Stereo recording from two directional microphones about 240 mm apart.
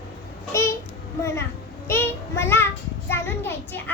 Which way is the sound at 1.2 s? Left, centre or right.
Centre.